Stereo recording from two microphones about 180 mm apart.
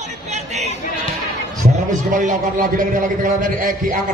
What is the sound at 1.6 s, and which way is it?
A man's voice, 45° right (ahead or behind).